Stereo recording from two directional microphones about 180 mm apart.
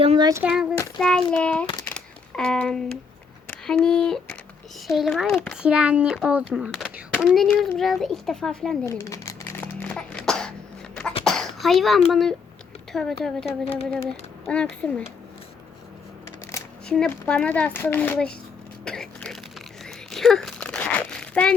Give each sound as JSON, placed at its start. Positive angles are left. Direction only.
{"t": 0.0, "sound": "a sound", "side_deg": -30}
{"t": 0.4, "sound": "a child's voice", "side_deg": -5}
{"t": 1.9, "sound": "typewriter", "side_deg": 5}
{"t": 3.4, "sound": "child singing", "side_deg": 5}
{"t": 4.9, "sound": "a child's voice", "side_deg": 0}
{"t": 8.9, "sound": "a sound", "side_deg": 15}
{"t": 11.3, "sound": "a child's voice", "side_deg": 0}
{"t": 13.4, "sound": "speech", "side_deg": 35}
{"t": 14.4, "sound": "a child's voice", "side_deg": 5}
{"t": 16.9, "sound": "speech", "side_deg": 5}
{"t": 18.9, "sound": "a sound", "side_deg": 5}